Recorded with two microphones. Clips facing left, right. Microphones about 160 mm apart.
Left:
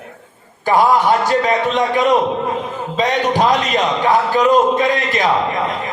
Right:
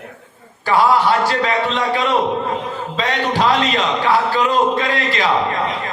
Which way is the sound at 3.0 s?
15° left (ahead or behind).